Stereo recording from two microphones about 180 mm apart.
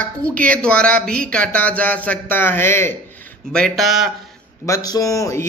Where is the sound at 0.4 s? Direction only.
5° left (ahead or behind).